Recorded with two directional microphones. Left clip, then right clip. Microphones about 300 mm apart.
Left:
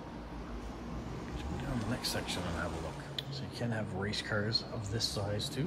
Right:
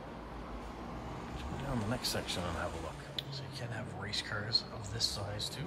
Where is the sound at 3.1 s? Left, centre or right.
Centre.